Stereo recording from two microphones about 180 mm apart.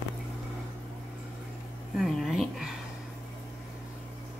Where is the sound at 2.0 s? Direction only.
Centre (ahead or behind).